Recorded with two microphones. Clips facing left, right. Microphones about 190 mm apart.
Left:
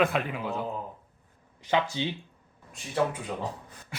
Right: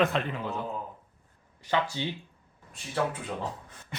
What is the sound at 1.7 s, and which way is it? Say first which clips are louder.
Speech: left 2 dB; 20° left (ahead or behind).